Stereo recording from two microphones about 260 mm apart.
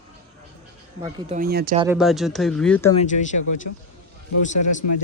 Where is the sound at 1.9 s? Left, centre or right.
Centre.